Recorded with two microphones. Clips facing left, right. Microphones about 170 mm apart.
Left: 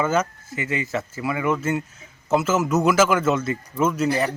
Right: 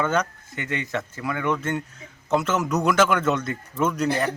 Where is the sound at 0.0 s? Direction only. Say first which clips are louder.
Left 2 dB; 5° left (ahead or behind).